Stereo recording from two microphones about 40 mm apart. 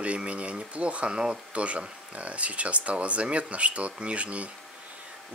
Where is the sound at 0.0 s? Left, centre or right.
Right.